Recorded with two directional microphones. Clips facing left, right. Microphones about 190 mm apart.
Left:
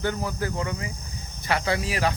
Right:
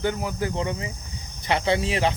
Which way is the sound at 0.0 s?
15° right (ahead or behind).